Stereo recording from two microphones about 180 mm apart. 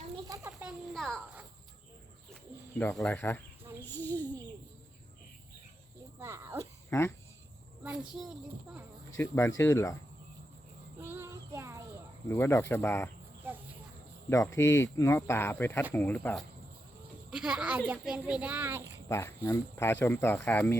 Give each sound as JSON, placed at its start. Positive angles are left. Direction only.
{"t": 0.6, "sound": "a sound", "side_deg": 0}
{"t": 2.7, "sound": "speech", "side_deg": 5}
{"t": 3.8, "sound": "a sound", "side_deg": 10}
{"t": 6.1, "sound": "cricket", "side_deg": -15}
{"t": 6.9, "sound": "speech", "side_deg": 15}
{"t": 7.9, "sound": "speech", "side_deg": -5}
{"t": 9.1, "sound": "speech", "side_deg": 15}
{"t": 11.0, "sound": "child singing", "side_deg": -15}
{"t": 12.3, "sound": "speech", "side_deg": 15}
{"t": 14.3, "sound": "speech", "side_deg": 15}
{"t": 17.3, "sound": "a child's voice", "side_deg": -5}
{"t": 19.0, "sound": "speech", "side_deg": 15}